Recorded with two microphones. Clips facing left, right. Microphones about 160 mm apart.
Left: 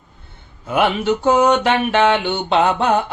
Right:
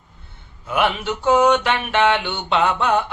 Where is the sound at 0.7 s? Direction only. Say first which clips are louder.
Left 4 dB; 40° left (ahead or behind).